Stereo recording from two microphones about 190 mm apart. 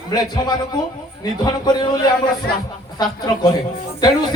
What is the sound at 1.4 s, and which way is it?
Speech, 20° left (ahead or behind).